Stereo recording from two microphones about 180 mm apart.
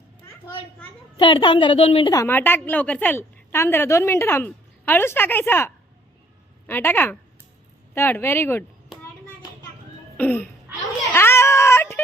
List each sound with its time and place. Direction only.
1.2 s a woman's voice: 25° left (ahead or behind)
2.0 s a woman's voice: 15° left (ahead or behind)
10.2 s a woman's voice: 10° left (ahead or behind)
11.1 s a sound: 15° left (ahead or behind)